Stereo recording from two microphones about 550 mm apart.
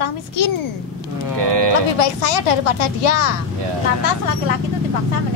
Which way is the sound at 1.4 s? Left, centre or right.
Right.